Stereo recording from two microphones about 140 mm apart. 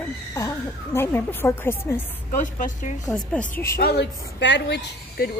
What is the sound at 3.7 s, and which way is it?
Speech, 90° left.